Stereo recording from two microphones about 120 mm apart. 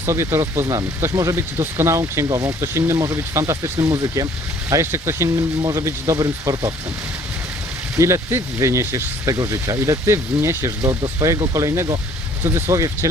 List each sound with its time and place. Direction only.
0.0 s speech: 20° right (ahead or behind)
7.9 s speech: 25° right (ahead or behind)